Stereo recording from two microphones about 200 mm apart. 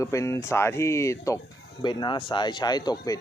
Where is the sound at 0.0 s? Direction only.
15° left (ahead or behind).